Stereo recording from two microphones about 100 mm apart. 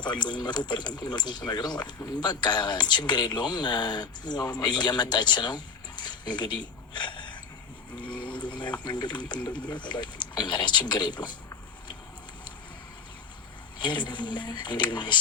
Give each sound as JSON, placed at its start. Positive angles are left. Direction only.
{"t": 0.0, "sound": "speech", "side_deg": 50}
{"t": 13.7, "sound": "speech", "side_deg": 50}